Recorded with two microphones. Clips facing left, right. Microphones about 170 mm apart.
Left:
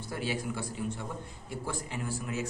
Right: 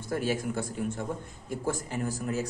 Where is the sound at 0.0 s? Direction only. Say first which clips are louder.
Right 5 dB; 45° right (ahead or behind).